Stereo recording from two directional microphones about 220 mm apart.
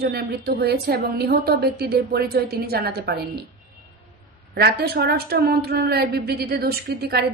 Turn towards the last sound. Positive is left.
turn(degrees=-45)  # may be behind; listen again after turning